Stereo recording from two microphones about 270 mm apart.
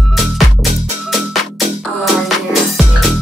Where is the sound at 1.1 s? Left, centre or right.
Centre.